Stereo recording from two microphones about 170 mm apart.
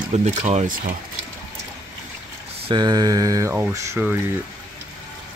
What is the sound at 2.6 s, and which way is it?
Mantra, 25° right (ahead or behind).